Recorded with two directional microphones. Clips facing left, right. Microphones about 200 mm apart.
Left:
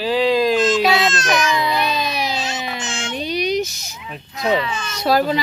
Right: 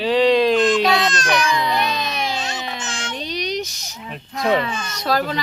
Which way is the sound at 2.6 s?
5° left (ahead or behind).